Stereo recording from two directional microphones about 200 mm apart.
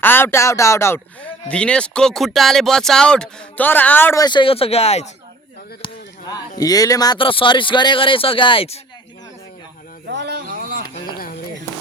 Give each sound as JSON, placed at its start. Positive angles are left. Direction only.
{"t": 0.0, "sound": "speech", "side_deg": 10}
{"t": 5.8, "sound": "chop", "side_deg": 20}
{"t": 6.6, "sound": "speech", "side_deg": 20}
{"t": 10.1, "sound": "a sound", "side_deg": -60}